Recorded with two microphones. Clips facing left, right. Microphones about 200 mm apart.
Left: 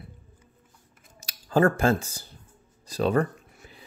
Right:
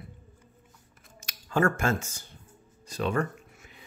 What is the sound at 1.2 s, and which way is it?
Speech, 35° left (ahead or behind).